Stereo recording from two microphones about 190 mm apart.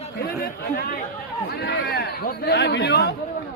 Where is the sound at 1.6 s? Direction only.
60° left (ahead or behind).